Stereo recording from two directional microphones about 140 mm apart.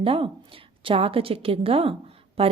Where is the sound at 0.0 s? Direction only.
40° right (ahead or behind).